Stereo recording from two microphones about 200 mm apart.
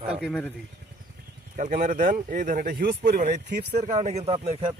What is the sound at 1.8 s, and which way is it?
A man's voice, 40° right (ahead or behind).